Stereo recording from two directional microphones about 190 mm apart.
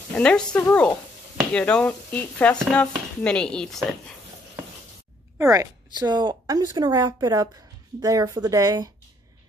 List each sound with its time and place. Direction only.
0.1 s speech: 5° left (ahead or behind)
5.4 s a woman's voice: 15° right (ahead or behind)